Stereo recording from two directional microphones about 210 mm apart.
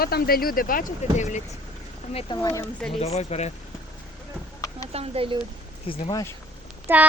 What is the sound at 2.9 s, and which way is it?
Speech, 30° left (ahead or behind).